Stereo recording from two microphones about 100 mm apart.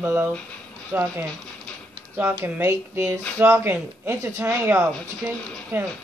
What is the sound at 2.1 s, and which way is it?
A man's voice, 25° right (ahead or behind).